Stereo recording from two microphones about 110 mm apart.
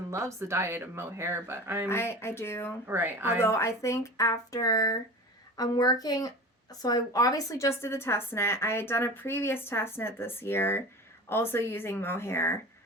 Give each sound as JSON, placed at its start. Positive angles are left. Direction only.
{"t": 0.1, "sound": "speech", "side_deg": -25}
{"t": 1.9, "sound": "speech", "side_deg": 25}
{"t": 2.8, "sound": "speech", "side_deg": -20}
{"t": 3.4, "sound": "speech", "side_deg": 25}